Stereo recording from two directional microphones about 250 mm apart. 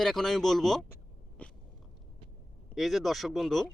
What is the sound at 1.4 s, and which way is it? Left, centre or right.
Biting, centre.